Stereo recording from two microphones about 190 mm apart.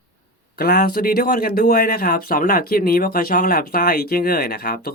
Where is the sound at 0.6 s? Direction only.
55° left (ahead or behind).